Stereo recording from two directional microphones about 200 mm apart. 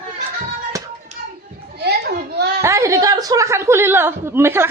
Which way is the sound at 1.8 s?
55° right (ahead or behind).